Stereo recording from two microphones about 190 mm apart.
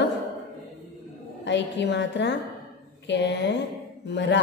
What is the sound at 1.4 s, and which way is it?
A woman's voice, 70° left (ahead or behind).